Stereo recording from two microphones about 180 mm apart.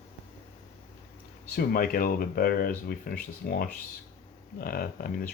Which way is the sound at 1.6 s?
55° left (ahead or behind).